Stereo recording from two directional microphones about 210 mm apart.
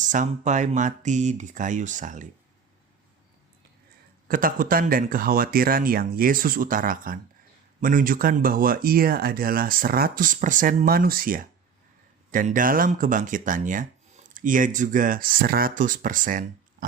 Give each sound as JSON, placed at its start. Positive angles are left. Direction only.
{"t": 0.0, "sound": "speech", "side_deg": -35}
{"t": 4.3, "sound": "speech", "side_deg": -40}